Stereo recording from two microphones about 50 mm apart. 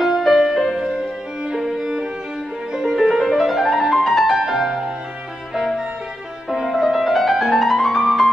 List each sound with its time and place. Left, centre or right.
0.0 s music: centre
0.7 s music: centre